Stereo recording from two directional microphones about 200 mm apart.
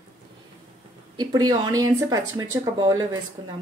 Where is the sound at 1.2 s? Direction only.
20° right (ahead or behind).